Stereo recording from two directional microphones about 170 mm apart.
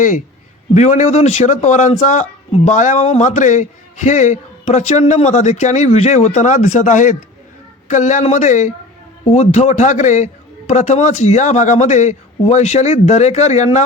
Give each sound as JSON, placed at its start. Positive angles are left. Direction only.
{"t": 0.7, "sound": "speech", "side_deg": 45}